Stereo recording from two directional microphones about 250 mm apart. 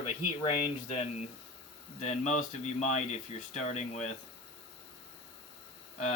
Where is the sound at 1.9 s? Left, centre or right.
Left.